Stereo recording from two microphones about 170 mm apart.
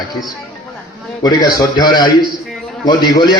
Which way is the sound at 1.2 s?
20° left (ahead or behind).